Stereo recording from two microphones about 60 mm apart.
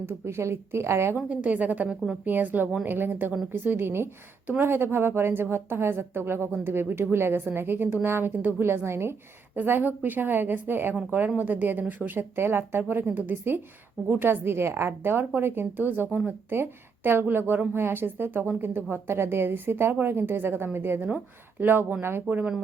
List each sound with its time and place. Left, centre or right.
0.0 s a woman's voice: right
1.1 s a woman's voice: right
9.6 s speech: right